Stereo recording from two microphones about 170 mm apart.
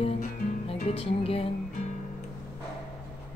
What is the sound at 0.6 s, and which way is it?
Speech, 35° left (ahead or behind).